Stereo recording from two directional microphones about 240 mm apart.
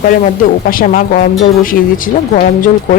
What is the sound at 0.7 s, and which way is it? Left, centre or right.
Speech, left.